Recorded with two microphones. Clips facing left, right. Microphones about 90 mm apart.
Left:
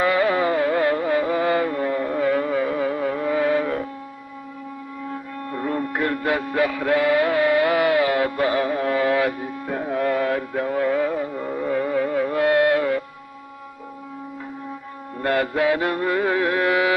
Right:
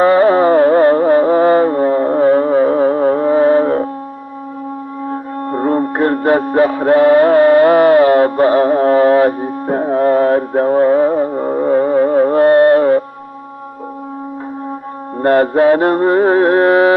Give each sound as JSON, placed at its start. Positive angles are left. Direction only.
{"t": 0.0, "sound": "music", "side_deg": -40}
{"t": 5.0, "sound": "music", "side_deg": -40}
{"t": 15.1, "sound": "mantra", "side_deg": -40}